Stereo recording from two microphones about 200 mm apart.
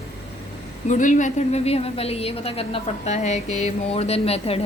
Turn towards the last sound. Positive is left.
turn(degrees=30)  # may be behind; listen again after turning